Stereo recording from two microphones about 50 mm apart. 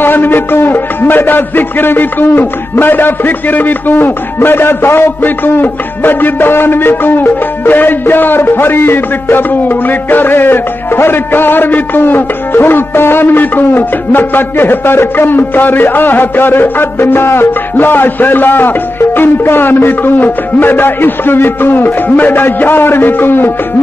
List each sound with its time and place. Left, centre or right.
0.0 s a man's voice: left